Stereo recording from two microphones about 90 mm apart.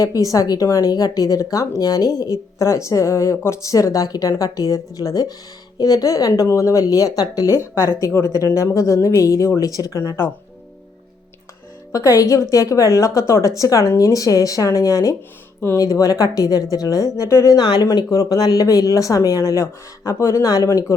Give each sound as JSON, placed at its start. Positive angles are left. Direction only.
{"t": 0.0, "sound": "speech", "side_deg": 40}
{"t": 11.9, "sound": "speech", "side_deg": 35}
{"t": 17.6, "sound": "speech", "side_deg": 55}
{"t": 17.9, "sound": "speech", "side_deg": 40}